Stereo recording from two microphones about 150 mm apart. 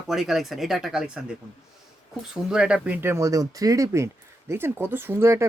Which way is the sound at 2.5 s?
5° right (ahead or behind).